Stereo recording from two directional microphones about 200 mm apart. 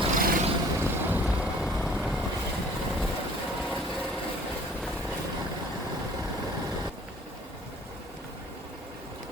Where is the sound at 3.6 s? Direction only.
Centre (ahead or behind).